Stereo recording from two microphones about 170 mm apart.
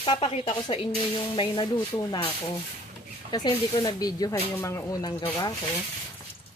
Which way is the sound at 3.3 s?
25° left (ahead or behind).